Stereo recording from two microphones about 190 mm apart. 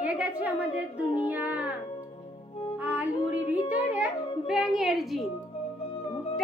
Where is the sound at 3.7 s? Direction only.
5° right (ahead or behind).